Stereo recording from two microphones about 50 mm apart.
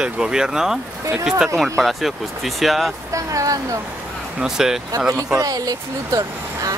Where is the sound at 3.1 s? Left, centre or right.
Right.